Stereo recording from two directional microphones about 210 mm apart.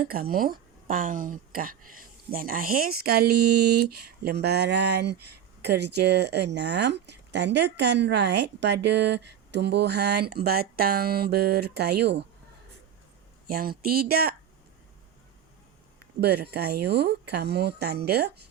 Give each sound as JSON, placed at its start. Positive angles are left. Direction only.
{"t": 0.0, "sound": "speech", "side_deg": -45}
{"t": 13.5, "sound": "speech", "side_deg": -45}
{"t": 16.2, "sound": "speech", "side_deg": -50}